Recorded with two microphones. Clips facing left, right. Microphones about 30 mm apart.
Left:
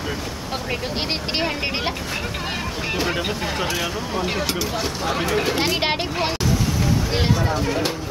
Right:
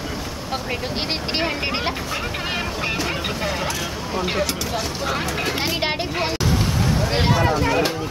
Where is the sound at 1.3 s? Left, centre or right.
Centre.